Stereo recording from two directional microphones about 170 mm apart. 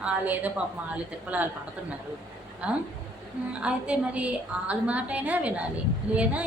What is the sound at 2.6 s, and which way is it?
A woman's voice, 5° right (ahead or behind).